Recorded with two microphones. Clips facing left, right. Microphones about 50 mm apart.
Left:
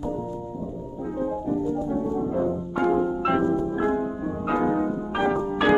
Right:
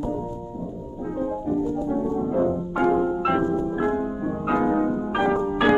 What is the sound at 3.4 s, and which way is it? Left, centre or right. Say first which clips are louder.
Music: even; right.